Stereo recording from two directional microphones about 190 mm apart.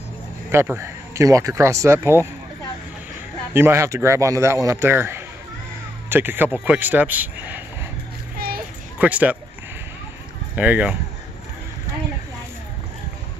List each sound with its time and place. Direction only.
0.5 s speech: 15° right (ahead or behind)
3.5 s speech: 15° right (ahead or behind)
8.4 s child singing: 55° right (ahead or behind)
8.9 s speech: 10° right (ahead or behind)
10.5 s speech: 10° right (ahead or behind)